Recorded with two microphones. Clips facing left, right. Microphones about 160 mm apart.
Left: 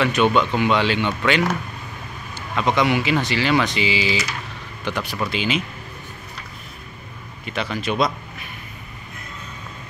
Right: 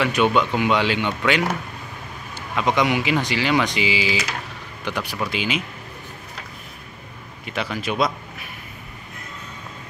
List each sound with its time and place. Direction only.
0.0 s speech: 10° right (ahead or behind)
7.4 s speech: 10° right (ahead or behind)